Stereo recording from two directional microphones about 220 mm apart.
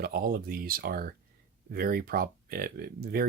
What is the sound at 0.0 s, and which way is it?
Speech, 40° right (ahead or behind).